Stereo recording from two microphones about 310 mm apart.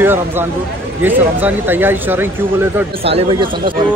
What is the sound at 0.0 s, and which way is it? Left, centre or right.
Speech, centre.